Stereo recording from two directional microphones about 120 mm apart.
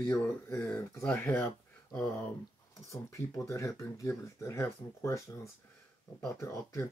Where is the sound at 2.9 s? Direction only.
25° left (ahead or behind).